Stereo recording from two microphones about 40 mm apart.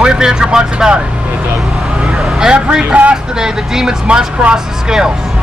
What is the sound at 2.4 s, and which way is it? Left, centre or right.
Speech, right.